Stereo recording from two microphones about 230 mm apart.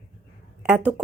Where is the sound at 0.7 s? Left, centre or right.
Centre.